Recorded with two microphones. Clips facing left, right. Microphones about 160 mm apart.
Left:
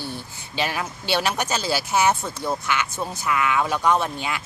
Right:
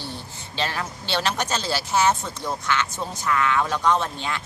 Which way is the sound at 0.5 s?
10° left (ahead or behind).